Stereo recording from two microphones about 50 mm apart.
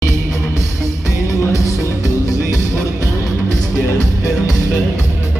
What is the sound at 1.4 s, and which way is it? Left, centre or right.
Music, left.